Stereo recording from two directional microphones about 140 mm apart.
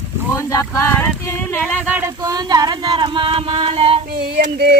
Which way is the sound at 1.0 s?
15° left (ahead or behind).